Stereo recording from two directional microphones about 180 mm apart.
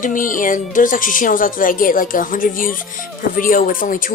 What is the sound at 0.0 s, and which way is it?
Speech, 50° left (ahead or behind).